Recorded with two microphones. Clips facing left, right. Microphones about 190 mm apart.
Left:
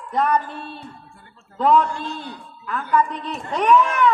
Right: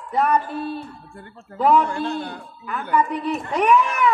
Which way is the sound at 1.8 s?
60° right (ahead or behind).